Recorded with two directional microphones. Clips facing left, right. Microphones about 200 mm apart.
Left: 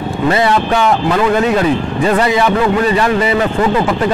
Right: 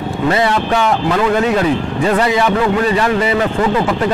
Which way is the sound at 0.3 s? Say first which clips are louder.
Left 2 dB; 15° left (ahead or behind).